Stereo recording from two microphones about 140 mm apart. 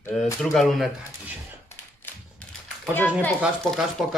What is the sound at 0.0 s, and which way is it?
Speech, 5° left (ahead or behind).